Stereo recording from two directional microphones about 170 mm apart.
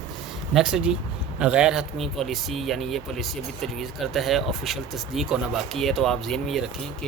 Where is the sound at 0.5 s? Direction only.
5° right (ahead or behind).